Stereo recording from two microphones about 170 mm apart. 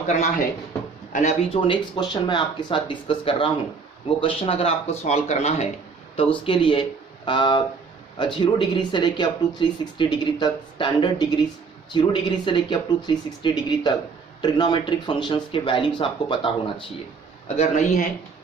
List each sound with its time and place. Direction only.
0.1 s speech: 45° left (ahead or behind)
1.6 s speech: 25° left (ahead or behind)
17.6 s speech: 45° left (ahead or behind)